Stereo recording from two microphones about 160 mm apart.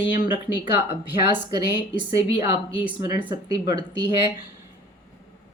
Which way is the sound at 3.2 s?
25° right (ahead or behind).